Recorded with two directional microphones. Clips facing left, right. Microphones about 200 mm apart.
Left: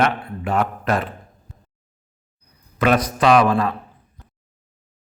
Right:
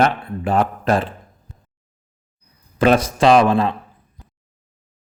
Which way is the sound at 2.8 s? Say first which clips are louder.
Right 3 dB; 30° right (ahead or behind).